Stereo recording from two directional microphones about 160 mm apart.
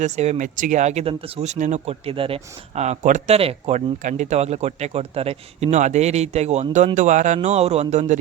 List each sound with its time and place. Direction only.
0.0 s speech: 45° right (ahead or behind)